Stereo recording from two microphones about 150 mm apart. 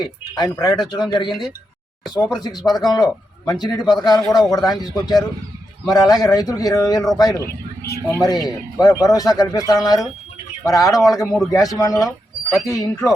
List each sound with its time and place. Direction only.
0.0 s a man's voice: 30° left (ahead or behind)
1.3 s a man's voice: centre (ahead or behind)
2.4 s a man's voice: 25° left (ahead or behind)
10.9 s a man's voice: centre (ahead or behind)
11.5 s a man's voice: 25° left (ahead or behind)
12.0 s a sound: centre (ahead or behind)
12.6 s a man's voice: 20° left (ahead or behind)